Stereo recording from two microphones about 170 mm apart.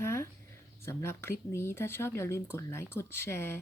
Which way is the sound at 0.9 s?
15° left (ahead or behind).